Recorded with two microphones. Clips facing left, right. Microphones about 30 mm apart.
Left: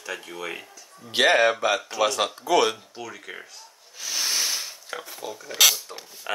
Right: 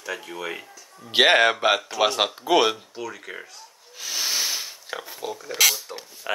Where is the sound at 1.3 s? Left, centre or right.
Right.